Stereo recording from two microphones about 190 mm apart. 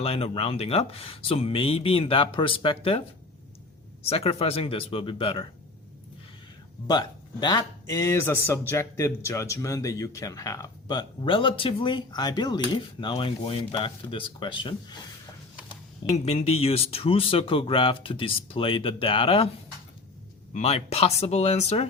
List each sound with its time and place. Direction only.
0.0 s speech: 30° left (ahead or behind)
4.0 s speech: 30° left (ahead or behind)
6.8 s speech: 20° left (ahead or behind)
16.1 s speech: 30° left (ahead or behind)
20.5 s speech: 35° left (ahead or behind)